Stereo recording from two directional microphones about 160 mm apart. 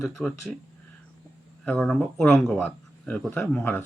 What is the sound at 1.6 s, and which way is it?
Speech, 5° left (ahead or behind).